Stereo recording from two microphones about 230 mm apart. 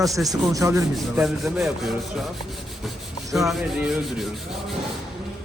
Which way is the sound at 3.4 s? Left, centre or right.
Centre.